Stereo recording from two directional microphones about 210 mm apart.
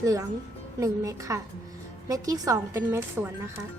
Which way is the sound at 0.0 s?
15° right (ahead or behind).